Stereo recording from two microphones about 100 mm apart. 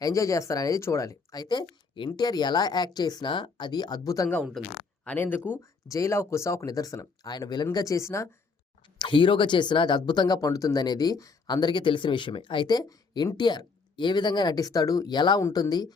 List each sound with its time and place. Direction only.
0.0 s speech: 35° left (ahead or behind)
4.6 s speech: centre (ahead or behind)
5.0 s speech: 20° left (ahead or behind)
5.9 s speech: 30° left (ahead or behind)
9.0 s speech: 55° left (ahead or behind)
15.4 s speech: 30° left (ahead or behind)